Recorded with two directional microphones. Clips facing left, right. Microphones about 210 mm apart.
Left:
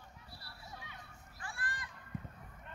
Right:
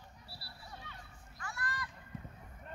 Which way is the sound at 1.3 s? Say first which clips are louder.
Right 3 dB; 30° left (ahead or behind).